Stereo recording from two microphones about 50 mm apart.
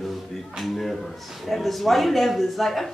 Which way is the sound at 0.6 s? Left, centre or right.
Centre.